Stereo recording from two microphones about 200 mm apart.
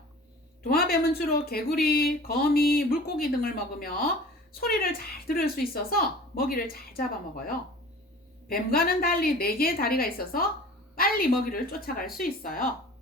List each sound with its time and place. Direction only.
0.7 s speech: 50° left (ahead or behind)